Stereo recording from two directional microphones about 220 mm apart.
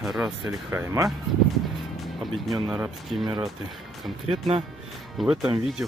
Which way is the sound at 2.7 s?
5° right (ahead or behind).